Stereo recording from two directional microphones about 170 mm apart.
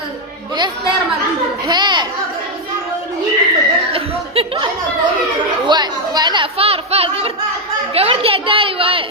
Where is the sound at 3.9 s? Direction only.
35° right (ahead or behind).